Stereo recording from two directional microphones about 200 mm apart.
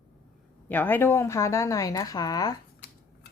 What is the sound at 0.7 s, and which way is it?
A woman's voice, 10° left (ahead or behind).